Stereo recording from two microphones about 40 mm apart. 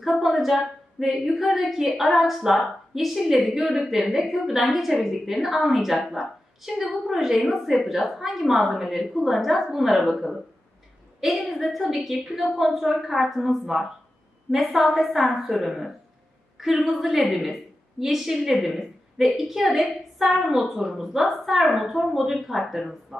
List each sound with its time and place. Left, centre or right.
0.0 s a woman's voice: centre